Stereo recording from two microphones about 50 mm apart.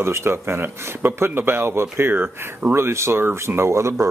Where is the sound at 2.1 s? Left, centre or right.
Right.